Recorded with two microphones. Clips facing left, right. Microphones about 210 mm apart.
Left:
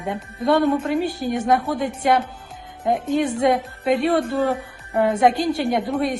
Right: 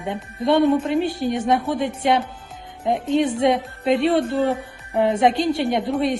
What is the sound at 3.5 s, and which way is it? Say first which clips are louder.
Speech: even; centre (ahead or behind).